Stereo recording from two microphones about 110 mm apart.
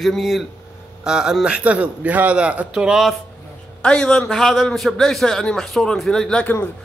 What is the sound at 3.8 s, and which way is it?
A man's voice, 10° left (ahead or behind).